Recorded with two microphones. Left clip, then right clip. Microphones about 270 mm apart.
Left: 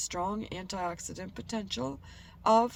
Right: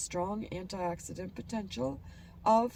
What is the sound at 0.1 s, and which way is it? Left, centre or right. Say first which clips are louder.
Speech: right 2 dB; centre.